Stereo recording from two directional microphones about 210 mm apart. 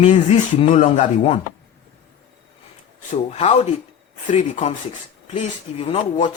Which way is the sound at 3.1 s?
30° left (ahead or behind).